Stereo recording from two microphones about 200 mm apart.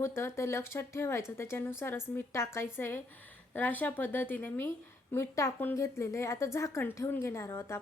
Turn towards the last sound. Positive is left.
turn(degrees=15)  # may be behind; listen again after turning